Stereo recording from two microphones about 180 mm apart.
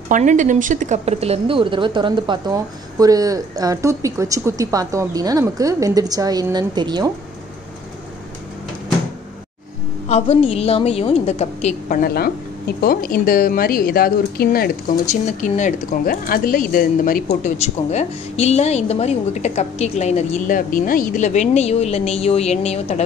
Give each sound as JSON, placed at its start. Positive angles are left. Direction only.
{"t": 0.1, "sound": "a woman's voice", "side_deg": -45}
{"t": 10.0, "sound": "speech", "side_deg": 35}
{"t": 12.0, "sound": "speech", "side_deg": 60}
{"t": 15.0, "sound": "speech", "side_deg": 45}